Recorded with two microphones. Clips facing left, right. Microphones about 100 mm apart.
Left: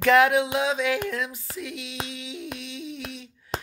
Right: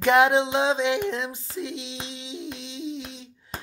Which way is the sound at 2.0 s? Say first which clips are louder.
Even; 25° right (ahead or behind).